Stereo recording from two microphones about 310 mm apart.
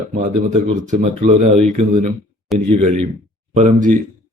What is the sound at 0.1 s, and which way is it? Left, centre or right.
Speech, right.